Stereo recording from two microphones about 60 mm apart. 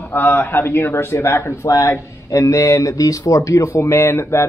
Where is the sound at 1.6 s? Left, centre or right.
Left.